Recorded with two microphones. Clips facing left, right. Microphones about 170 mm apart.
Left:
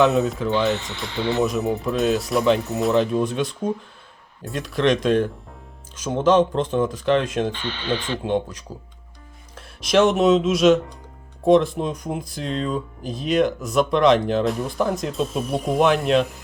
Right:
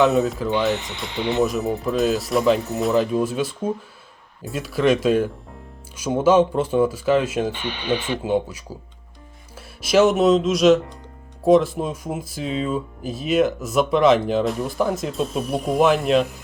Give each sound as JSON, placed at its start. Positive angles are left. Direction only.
{"t": 0.0, "sound": "speech", "side_deg": 0}
{"t": 0.7, "sound": "speech", "side_deg": -20}
{"t": 1.4, "sound": "speech", "side_deg": 0}